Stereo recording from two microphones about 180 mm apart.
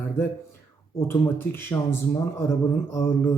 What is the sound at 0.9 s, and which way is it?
Speech, 15° left (ahead or behind).